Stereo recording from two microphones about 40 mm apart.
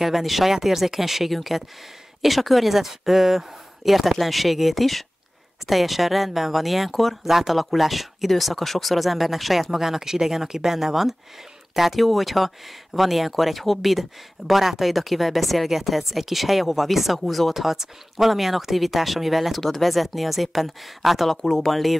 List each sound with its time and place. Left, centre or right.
0.0 s speech: centre
21.4 s speech: centre